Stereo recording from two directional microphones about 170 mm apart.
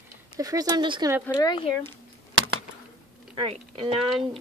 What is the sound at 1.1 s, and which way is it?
Speech, 10° right (ahead or behind).